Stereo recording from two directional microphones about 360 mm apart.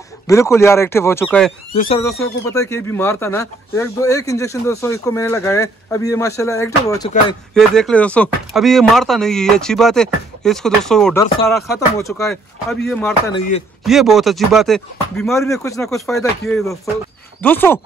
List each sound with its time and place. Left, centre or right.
0.3 s speech: centre
13.3 s speech: centre
13.8 s speech: centre